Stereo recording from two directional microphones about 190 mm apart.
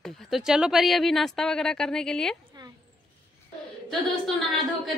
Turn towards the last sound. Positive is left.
turn(degrees=0)  # may be behind; listen again after turning